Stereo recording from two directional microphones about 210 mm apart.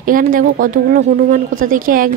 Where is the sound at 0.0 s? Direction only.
40° right (ahead or behind).